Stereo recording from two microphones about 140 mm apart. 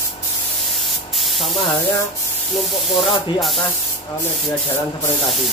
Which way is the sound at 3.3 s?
Centre (ahead or behind).